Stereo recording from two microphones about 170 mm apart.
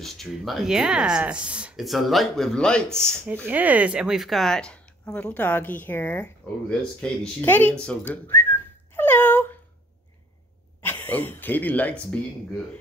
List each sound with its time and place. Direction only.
0.0 s speech: centre (ahead or behind)
3.4 s speech: 10° right (ahead or behind); by 9.5 s 10° left (ahead or behind)
10.8 s speech: 10° left (ahead or behind)